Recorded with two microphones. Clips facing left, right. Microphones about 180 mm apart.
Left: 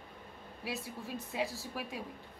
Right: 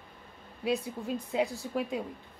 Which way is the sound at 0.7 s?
20° right (ahead or behind).